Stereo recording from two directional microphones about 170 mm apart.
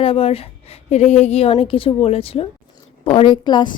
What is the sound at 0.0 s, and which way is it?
A woman's voice, 35° left (ahead or behind).